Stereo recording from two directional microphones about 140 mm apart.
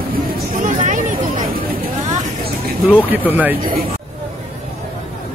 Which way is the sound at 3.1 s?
10° right (ahead or behind).